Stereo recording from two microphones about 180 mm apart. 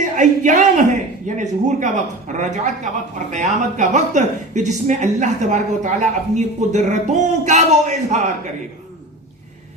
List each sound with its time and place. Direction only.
0.0 s a man's voice: 45° right (ahead or behind)